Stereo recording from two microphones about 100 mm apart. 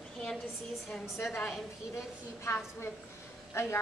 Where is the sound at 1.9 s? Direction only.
25° left (ahead or behind).